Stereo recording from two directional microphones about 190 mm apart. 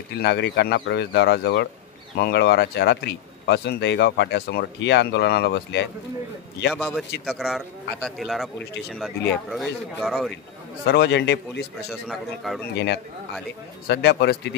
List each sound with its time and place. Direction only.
0.1 s speech: 65° left (ahead or behind)
6.7 s a man's voice: centre (ahead or behind)
9.5 s a man's voice: centre (ahead or behind)
10.9 s speech: 60° left (ahead or behind)
12.1 s a man's voice: centre (ahead or behind)
12.7 s speech: 65° left (ahead or behind)